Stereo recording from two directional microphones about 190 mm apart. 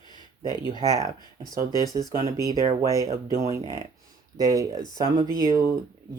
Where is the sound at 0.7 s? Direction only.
20° left (ahead or behind).